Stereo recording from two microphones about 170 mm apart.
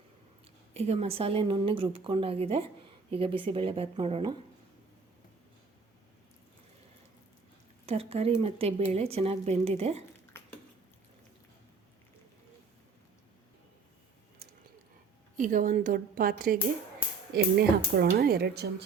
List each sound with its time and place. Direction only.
0.7 s a woman's voice: 35° right (ahead or behind)
7.9 s a woman's voice: 35° right (ahead or behind)
10.3 s a sound: 15° left (ahead or behind)
15.4 s a woman's voice: 50° right (ahead or behind)
17.3 s a woman's voice: 70° right (ahead or behind)